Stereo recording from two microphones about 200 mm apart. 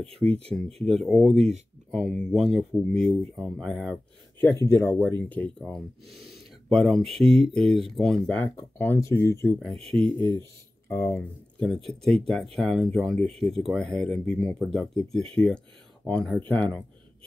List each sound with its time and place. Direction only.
0.2 s speech: 5° left (ahead or behind)
1.3 s speech: 30° right (ahead or behind)
1.9 s speech: 5° left (ahead or behind)
10.9 s speech: 15° left (ahead or behind)